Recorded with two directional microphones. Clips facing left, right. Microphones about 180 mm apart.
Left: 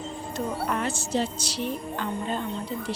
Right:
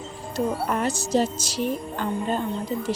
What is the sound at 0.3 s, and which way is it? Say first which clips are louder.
Speech: right 4 dB; 40° right (ahead or behind).